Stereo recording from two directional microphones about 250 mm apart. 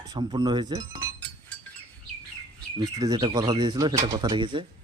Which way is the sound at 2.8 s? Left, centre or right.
Centre.